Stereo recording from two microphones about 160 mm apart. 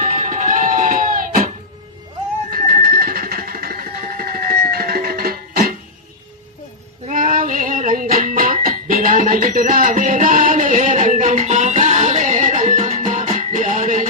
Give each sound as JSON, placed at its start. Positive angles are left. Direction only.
{"t": 0.0, "sound": "music", "side_deg": -55}
{"t": 2.5, "sound": "music", "side_deg": -60}
{"t": 7.1, "sound": "female singing", "side_deg": -55}
{"t": 8.2, "sound": "music", "side_deg": -55}